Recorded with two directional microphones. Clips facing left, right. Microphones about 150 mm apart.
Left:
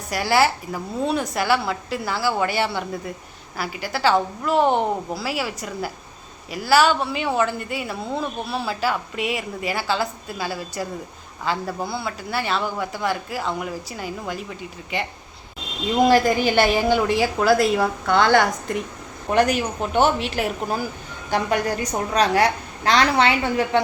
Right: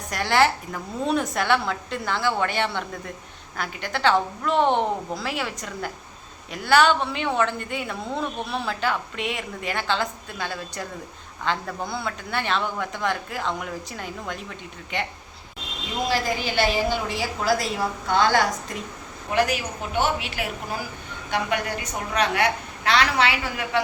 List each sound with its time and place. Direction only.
0.1 s speech: 5° left (ahead or behind)
16.0 s a woman's voice: 55° left (ahead or behind)
19.5 s a woman's voice: 45° left (ahead or behind); by 23.8 s 30° left (ahead or behind)